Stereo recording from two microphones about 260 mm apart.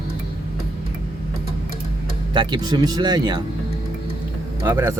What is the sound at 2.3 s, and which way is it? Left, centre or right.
Speech, centre.